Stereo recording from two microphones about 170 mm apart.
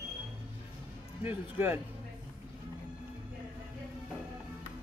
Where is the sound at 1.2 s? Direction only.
10° right (ahead or behind).